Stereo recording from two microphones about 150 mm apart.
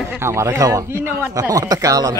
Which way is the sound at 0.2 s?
20° right (ahead or behind).